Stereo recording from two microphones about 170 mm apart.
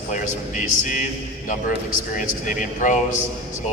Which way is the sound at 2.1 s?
50° left (ahead or behind).